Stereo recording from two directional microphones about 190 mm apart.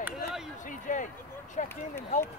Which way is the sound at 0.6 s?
45° left (ahead or behind).